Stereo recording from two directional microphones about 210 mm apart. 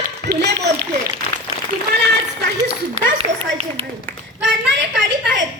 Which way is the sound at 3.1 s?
30° right (ahead or behind).